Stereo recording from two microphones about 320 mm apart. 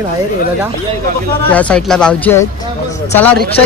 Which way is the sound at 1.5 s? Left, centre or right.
Centre.